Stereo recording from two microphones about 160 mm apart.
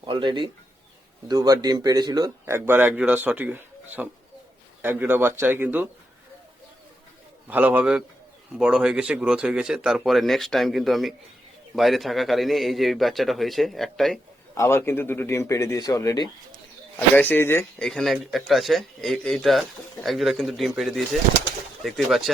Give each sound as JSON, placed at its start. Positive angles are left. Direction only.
{"t": 0.0, "sound": "speech", "side_deg": -30}
{"t": 4.8, "sound": "speech", "side_deg": -10}
{"t": 7.4, "sound": "speech", "side_deg": -10}
{"t": 14.5, "sound": "speech", "side_deg": 15}
{"t": 17.2, "sound": "speech", "side_deg": 10}
{"t": 17.8, "sound": "speech", "side_deg": 0}